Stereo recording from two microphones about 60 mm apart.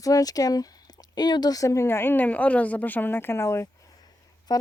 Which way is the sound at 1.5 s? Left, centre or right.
Left.